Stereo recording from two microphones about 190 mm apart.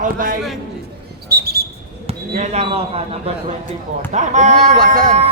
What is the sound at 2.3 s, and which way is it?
A man's voice, 35° right (ahead or behind).